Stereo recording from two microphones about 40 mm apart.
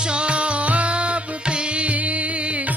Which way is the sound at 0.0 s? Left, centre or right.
Right.